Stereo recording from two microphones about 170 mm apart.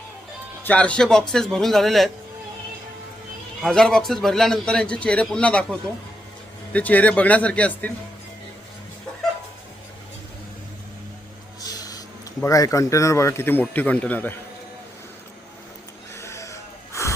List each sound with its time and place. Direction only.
0.6 s a man's voice: 10° left (ahead or behind)
3.6 s a man's voice: 5° left (ahead or behind)
6.7 s speech: 10° left (ahead or behind)
11.6 s speech: 20° left (ahead or behind)
16.2 s wheeze: 15° left (ahead or behind)